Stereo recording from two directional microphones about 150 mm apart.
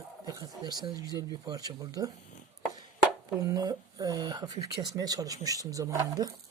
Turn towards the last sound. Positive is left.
turn(degrees=-25)  # may be behind; listen again after turning